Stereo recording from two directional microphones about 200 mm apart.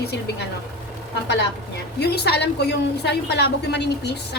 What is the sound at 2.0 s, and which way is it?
A woman's voice, 55° left (ahead or behind).